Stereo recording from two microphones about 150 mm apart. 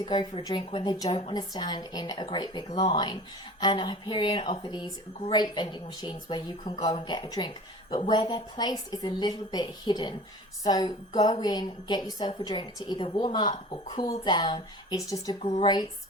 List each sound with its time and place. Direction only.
0.0 s speech: 30° left (ahead or behind)
1.3 s a woman's voice: 30° left (ahead or behind)
15.4 s speech: 40° left (ahead or behind)